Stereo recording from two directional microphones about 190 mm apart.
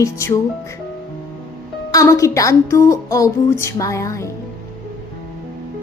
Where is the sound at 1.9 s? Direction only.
15° left (ahead or behind).